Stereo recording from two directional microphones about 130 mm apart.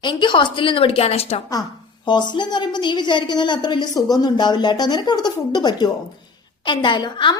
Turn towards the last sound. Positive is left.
turn(degrees=35)  # may be behind; listen again after turning